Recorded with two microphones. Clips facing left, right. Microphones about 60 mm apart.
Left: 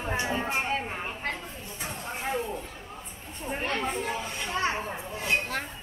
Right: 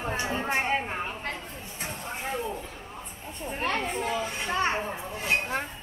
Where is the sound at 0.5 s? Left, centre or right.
Right.